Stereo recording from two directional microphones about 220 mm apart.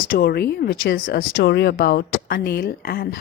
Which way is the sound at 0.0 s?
40° left (ahead or behind).